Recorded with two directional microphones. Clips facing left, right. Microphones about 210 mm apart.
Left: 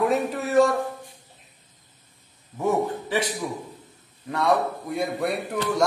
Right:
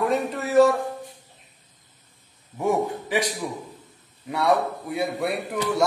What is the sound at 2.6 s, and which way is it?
Speech, 15° right (ahead or behind).